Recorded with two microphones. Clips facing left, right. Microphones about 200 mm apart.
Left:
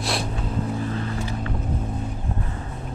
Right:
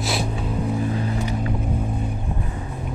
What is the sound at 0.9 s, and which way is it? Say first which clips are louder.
Vehicle: right 3 dB; 20° right (ahead or behind).